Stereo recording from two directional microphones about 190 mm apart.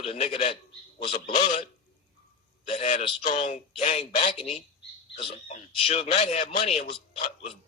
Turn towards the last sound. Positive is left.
turn(degrees=30)  # may be behind; listen again after turning